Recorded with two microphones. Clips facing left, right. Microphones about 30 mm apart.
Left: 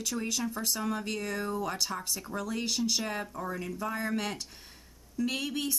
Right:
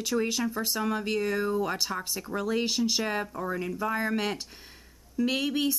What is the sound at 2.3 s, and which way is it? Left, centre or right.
Speech, right.